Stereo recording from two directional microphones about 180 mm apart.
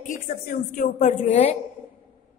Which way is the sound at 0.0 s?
45° left (ahead or behind).